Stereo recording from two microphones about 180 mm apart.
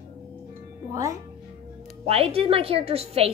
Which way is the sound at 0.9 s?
15° right (ahead or behind).